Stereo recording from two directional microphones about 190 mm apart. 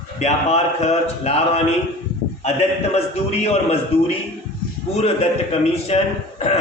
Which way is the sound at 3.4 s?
35° left (ahead or behind).